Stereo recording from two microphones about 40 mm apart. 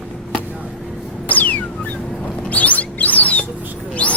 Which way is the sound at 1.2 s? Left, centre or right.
Left.